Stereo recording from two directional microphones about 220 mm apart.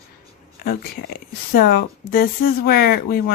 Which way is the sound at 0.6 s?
45° left (ahead or behind).